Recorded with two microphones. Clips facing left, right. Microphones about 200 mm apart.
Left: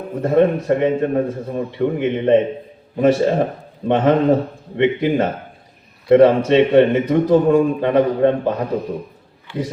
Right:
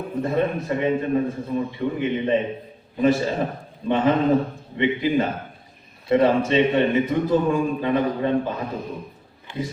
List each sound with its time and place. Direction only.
0.2 s a man's voice: 60° left (ahead or behind)